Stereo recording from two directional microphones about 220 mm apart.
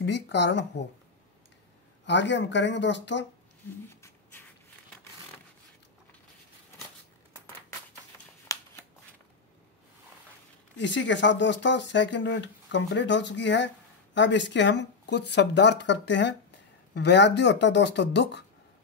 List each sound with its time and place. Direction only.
0.0 s speech: 50° left (ahead or behind)
2.0 s speech: 55° left (ahead or behind)
8.5 s shuffling cards: 15° left (ahead or behind)
10.8 s speech: 55° left (ahead or behind)